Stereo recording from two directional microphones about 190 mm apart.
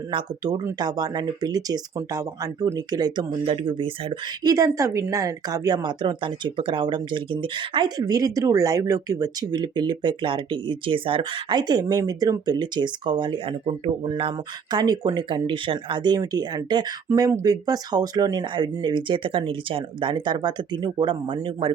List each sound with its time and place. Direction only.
0.1 s speech: 25° right (ahead or behind)